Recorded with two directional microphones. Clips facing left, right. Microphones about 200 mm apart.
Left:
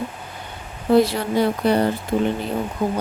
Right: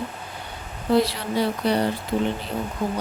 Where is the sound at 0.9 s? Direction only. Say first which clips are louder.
Left 4 dB; 50° left (ahead or behind).